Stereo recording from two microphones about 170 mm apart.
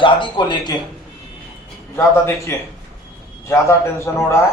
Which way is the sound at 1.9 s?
15° left (ahead or behind).